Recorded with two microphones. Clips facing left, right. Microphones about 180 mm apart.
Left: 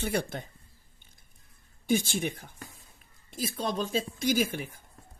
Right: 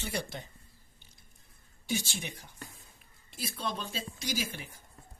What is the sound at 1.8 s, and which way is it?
Speech, 50° left (ahead or behind).